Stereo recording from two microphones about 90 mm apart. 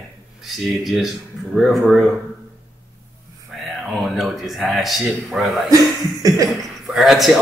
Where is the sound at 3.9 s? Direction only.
Centre (ahead or behind).